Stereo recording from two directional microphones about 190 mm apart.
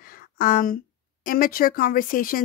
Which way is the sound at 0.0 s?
50° left (ahead or behind).